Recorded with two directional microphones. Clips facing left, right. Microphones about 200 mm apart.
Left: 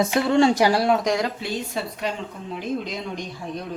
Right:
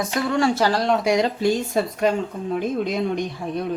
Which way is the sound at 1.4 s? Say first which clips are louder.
Right 8 dB; 45° right (ahead or behind).